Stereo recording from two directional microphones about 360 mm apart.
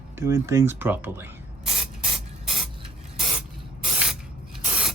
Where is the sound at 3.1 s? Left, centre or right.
Centre.